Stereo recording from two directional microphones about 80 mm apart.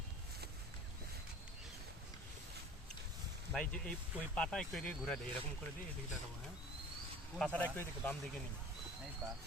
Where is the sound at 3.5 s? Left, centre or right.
Centre.